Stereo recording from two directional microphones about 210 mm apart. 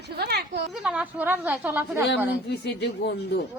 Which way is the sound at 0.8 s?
5° right (ahead or behind).